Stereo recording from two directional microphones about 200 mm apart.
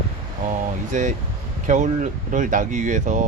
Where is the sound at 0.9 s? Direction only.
40° right (ahead or behind).